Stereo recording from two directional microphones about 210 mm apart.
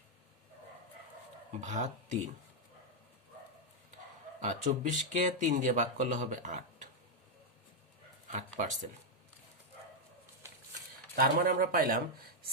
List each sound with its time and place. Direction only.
1.6 s speech: 35° right (ahead or behind)
4.4 s speech: 35° right (ahead or behind)
8.3 s speech: 35° right (ahead or behind)
11.1 s speech: 45° right (ahead or behind)